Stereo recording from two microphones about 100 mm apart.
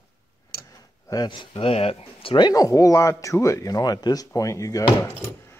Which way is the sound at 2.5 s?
35° left (ahead or behind).